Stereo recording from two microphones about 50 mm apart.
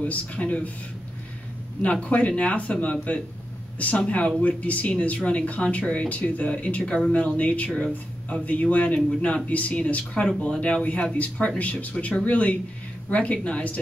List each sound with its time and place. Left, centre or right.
0.0 s speech: left
1.8 s speech: left